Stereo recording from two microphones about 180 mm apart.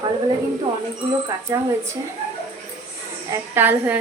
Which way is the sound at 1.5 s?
15° right (ahead or behind).